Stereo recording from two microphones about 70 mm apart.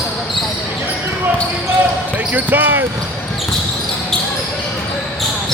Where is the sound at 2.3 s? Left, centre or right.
Right.